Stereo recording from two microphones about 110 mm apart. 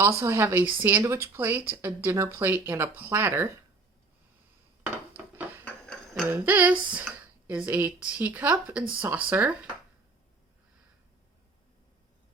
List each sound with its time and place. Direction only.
0.0 s speech: 25° right (ahead or behind)
4.8 s dishes: 15° right (ahead or behind)
5.6 s a sound: 5° left (ahead or behind)
6.3 s speech: 15° right (ahead or behind)